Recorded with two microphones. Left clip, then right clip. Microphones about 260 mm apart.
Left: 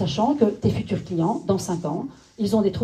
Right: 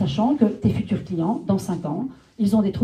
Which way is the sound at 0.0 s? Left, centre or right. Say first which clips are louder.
Left 1 dB; left.